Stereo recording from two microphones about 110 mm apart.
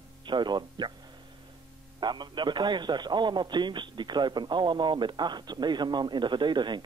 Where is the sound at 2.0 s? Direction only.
40° right (ahead or behind).